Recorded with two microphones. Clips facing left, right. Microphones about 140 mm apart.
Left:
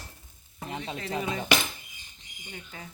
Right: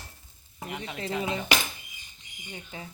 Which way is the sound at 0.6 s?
30° left (ahead or behind).